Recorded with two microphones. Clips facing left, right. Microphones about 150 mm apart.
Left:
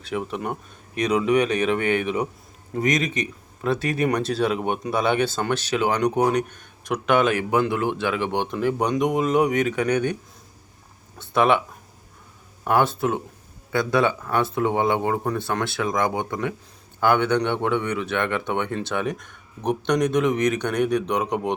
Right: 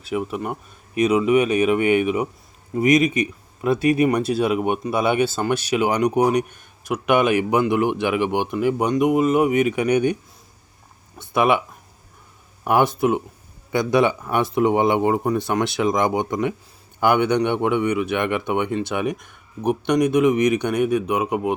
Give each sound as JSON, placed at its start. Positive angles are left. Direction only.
{"t": 0.0, "sound": "speech", "side_deg": -5}
{"t": 11.2, "sound": "speech", "side_deg": -10}
{"t": 12.6, "sound": "speech", "side_deg": -15}